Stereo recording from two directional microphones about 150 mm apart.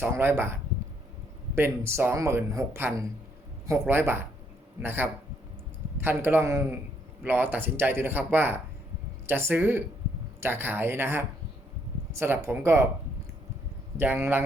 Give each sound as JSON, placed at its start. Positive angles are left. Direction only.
{"t": 0.0, "sound": "speech", "side_deg": -15}
{"t": 13.9, "sound": "speech", "side_deg": -15}